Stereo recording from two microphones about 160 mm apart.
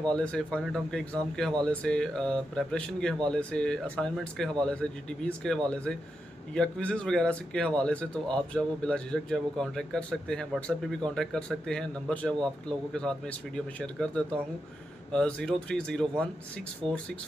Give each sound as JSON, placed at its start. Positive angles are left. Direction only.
{"t": 0.0, "sound": "speech", "side_deg": 5}